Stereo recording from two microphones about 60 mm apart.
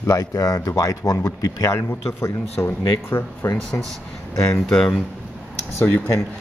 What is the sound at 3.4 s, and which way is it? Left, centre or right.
Speech, left.